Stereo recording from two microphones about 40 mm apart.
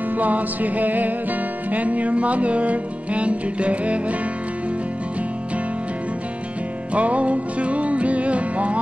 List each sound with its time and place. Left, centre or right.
0.2 s music: right
6.9 s music: right